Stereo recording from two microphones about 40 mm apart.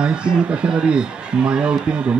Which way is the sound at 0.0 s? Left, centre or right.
Right.